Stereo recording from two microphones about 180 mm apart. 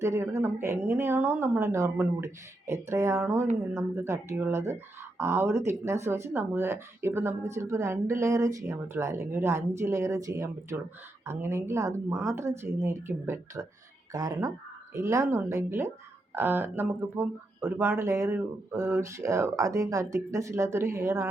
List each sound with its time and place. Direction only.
0.0 s speech: 15° right (ahead or behind)